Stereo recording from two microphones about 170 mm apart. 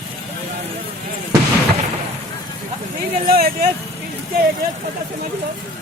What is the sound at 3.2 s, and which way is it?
Speech, 60° right (ahead or behind).